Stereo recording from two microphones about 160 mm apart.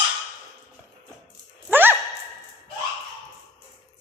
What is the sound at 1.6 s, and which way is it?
Sigh, 10° right (ahead or behind).